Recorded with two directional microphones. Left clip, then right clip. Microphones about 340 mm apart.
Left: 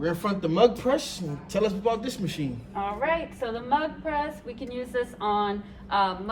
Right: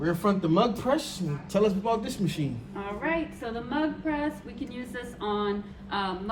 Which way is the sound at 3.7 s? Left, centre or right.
Centre.